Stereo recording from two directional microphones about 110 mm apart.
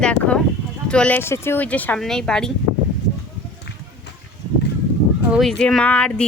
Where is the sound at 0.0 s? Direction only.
10° left (ahead or behind).